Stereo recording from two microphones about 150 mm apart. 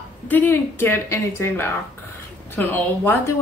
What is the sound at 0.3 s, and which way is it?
A woman's voice, 10° left (ahead or behind).